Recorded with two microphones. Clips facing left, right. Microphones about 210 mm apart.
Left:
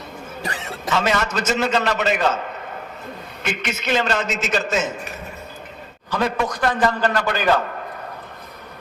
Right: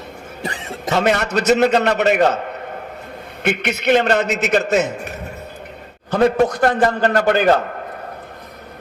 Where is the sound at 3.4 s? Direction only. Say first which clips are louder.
Right 7 dB; 60° right (ahead or behind).